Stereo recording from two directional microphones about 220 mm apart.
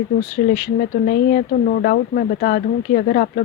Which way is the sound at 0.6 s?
45° left (ahead or behind).